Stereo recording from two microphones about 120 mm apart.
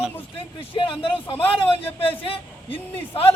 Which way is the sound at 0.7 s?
45° left (ahead or behind).